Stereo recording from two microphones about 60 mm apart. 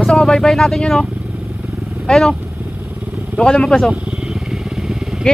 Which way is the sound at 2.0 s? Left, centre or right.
Centre.